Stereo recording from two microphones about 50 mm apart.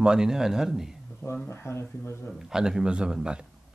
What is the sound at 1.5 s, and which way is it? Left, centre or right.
Speech, left.